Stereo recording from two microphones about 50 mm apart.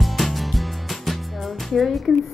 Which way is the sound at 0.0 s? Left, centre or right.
Centre.